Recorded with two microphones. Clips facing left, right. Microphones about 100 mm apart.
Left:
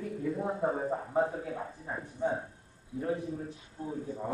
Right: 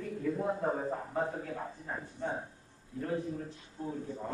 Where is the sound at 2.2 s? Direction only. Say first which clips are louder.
Left 6 dB; 15° left (ahead or behind).